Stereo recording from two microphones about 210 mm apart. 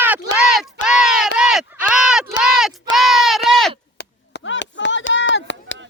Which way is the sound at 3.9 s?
55° left (ahead or behind).